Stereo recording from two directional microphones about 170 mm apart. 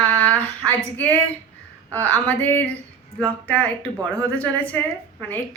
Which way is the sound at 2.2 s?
10° left (ahead or behind).